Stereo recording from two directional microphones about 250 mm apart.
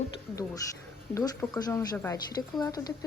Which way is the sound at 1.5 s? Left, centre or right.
Centre.